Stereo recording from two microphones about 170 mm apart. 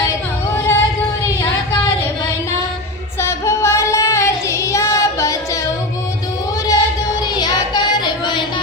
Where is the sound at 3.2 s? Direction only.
15° left (ahead or behind).